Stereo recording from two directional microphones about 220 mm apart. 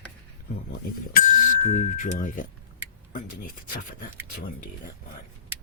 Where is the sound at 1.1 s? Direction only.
35° left (ahead or behind).